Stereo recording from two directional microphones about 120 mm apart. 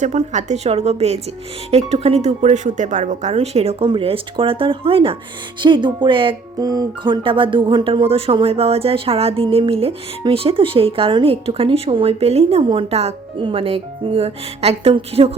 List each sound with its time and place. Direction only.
0.0 s speech: 80° right
3.3 s speech: 60° right (ahead or behind)
3.8 s speech: 45° right (ahead or behind)
5.5 s music: 40° right (ahead or behind)
6.6 s music: 30° right (ahead or behind)
8.0 s speech: 50° right (ahead or behind)
13.4 s speech: 50° right (ahead or behind)